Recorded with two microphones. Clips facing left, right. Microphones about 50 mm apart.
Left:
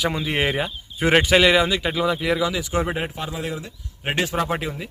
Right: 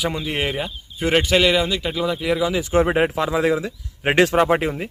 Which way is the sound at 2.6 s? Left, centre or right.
Right.